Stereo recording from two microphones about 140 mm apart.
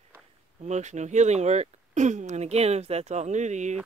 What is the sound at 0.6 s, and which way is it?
Speech, 55° right (ahead or behind).